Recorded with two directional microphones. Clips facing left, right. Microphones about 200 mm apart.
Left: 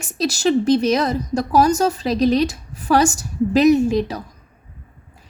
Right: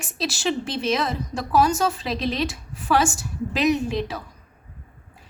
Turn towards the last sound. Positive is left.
turn(degrees=40)  # may be behind; listen again after turning